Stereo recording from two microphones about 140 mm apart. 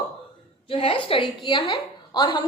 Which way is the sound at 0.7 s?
40° left (ahead or behind).